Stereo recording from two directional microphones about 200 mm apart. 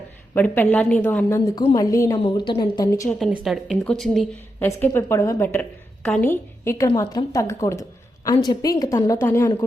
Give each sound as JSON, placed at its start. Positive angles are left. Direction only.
{"t": 0.3, "sound": "a woman's voice", "side_deg": 10}
{"t": 3.4, "sound": "a woman's voice", "side_deg": 0}
{"t": 4.6, "sound": "a woman's voice", "side_deg": 10}